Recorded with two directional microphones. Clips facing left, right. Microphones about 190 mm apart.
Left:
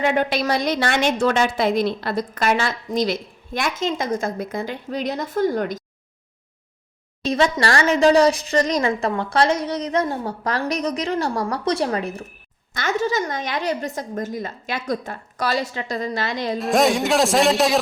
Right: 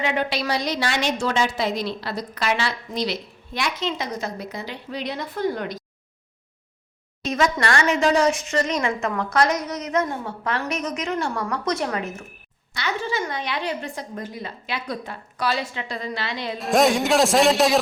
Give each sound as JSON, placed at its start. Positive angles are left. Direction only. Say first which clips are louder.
{"t": 0.0, "sound": "a woman's voice", "louder": "left 4 dB", "side_deg": 50}
{"t": 7.3, "sound": "a woman's voice", "louder": "left 3 dB", "side_deg": 30}
{"t": 12.7, "sound": "a woman's voice", "louder": "left 5 dB", "side_deg": 45}
{"t": 16.6, "sound": "a man's voice", "louder": "even", "side_deg": 0}